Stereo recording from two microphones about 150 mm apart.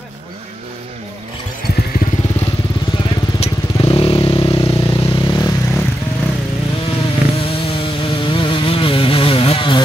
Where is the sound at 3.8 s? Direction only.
35° left (ahead or behind).